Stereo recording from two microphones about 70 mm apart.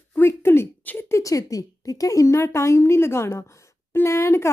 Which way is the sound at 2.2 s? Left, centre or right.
Left.